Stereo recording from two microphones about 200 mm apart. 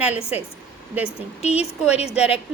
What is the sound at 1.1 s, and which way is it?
Speech, 30° left (ahead or behind).